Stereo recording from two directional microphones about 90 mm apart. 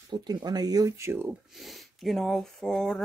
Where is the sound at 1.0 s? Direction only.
25° right (ahead or behind).